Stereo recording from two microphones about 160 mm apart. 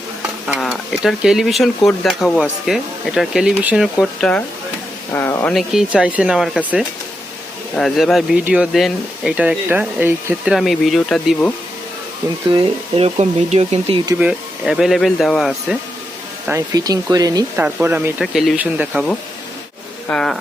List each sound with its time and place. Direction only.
0.4 s stir: centre (ahead or behind)
1.0 s speech: 5° right (ahead or behind)
4.0 s speech: 5° left (ahead or behind)
5.5 s speech: 5° right (ahead or behind)
10.5 s speech: centre (ahead or behind)
12.5 s speech: 30° right (ahead or behind)
13.1 s speech: 45° right (ahead or behind)
14.2 s speech: 5° right (ahead or behind)
16.5 s speech: 20° right (ahead or behind)
17.6 s speech: 10° right (ahead or behind)
20.1 s speech: 5° left (ahead or behind)